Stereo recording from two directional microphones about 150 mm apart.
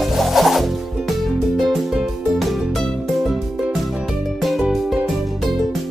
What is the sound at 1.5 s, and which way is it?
Music, centre (ahead or behind).